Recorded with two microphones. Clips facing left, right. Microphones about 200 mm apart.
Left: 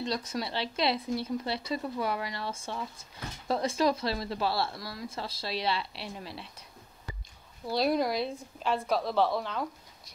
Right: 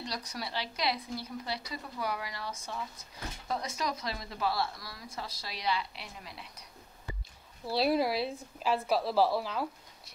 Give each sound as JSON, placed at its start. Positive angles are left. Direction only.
{"t": 0.0, "sound": "speech", "side_deg": 25}
{"t": 7.6, "sound": "a woman's voice", "side_deg": -5}